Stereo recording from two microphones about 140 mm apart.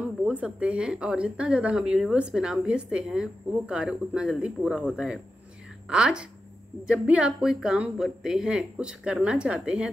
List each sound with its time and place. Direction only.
0.2 s speech: 10° right (ahead or behind)